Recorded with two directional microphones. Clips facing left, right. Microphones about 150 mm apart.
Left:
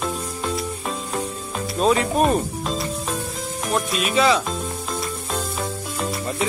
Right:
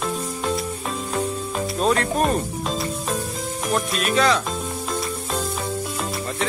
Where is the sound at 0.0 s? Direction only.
Centre (ahead or behind).